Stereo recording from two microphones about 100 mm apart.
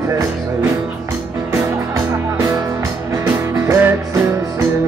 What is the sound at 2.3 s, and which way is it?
Music, 30° right (ahead or behind).